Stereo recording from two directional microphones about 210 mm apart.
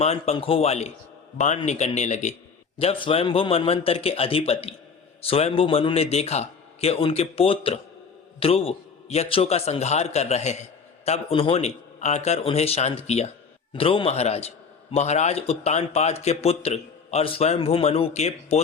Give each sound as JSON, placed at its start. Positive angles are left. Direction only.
{"t": 0.0, "sound": "a man's voice", "side_deg": 30}